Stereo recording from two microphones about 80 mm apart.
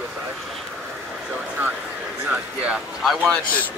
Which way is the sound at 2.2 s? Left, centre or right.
Centre.